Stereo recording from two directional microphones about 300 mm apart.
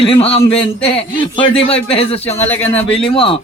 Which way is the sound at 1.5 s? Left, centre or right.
Centre.